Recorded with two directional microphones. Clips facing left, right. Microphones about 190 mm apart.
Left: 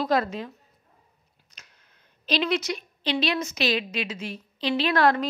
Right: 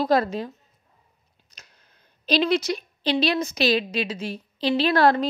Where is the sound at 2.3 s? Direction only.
35° right (ahead or behind).